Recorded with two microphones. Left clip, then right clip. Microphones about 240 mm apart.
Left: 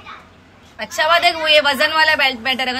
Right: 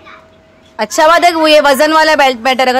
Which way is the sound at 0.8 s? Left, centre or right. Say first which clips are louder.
Right 7 dB; centre.